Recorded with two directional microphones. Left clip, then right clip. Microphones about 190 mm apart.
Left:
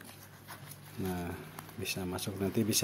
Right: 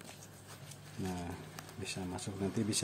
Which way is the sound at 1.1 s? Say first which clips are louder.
Left 4 dB; 15° left (ahead or behind).